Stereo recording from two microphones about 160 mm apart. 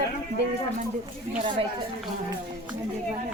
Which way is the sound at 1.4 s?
35° right (ahead or behind).